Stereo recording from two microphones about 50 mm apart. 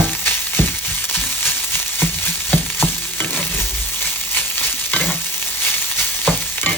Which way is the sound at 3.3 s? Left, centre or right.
Left.